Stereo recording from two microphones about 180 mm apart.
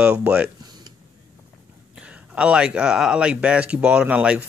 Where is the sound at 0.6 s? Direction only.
25° right (ahead or behind).